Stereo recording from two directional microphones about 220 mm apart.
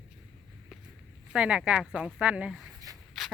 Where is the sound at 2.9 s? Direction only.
15° right (ahead or behind).